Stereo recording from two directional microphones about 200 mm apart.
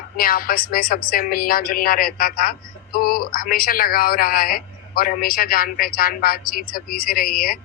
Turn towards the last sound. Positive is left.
turn(degrees=45)  # may be behind; listen again after turning